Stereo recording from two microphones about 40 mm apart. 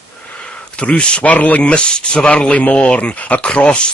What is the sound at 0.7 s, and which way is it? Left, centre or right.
Speech, left.